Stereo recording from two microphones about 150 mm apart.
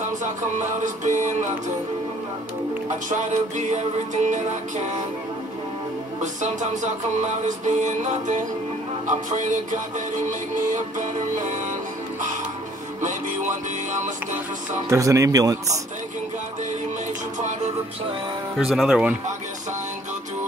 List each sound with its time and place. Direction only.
0.2 s music: 55° right (ahead or behind)
3.1 s music: 55° right (ahead or behind)
6.2 s music: 55° right (ahead or behind)
14.9 s speech: 20° right (ahead or behind)
18.6 s speech: centre (ahead or behind)